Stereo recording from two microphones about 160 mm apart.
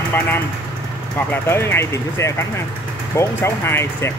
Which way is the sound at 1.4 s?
15° left (ahead or behind).